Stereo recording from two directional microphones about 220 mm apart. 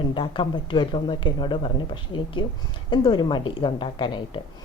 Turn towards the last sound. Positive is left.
turn(degrees=20)  # may be behind; listen again after turning